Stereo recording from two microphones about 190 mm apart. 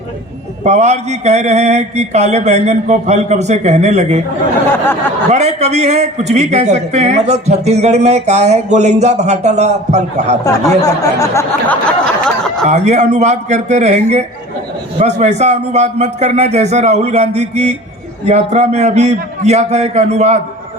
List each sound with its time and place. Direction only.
0.6 s a man's voice: 35° right (ahead or behind)
5.3 s a man's voice: 35° right (ahead or behind)
10.4 s speech: 15° left (ahead or behind)
12.6 s a man's voice: 35° right (ahead or behind)